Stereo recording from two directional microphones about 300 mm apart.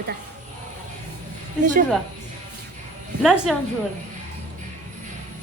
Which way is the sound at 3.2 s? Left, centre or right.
Centre.